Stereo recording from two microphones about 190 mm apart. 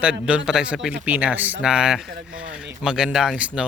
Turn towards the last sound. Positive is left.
turn(degrees=-5)  # may be behind; listen again after turning